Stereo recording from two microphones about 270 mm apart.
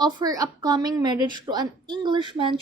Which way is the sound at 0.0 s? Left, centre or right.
Centre.